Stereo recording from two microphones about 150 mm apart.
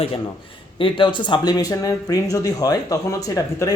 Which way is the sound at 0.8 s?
35° left (ahead or behind).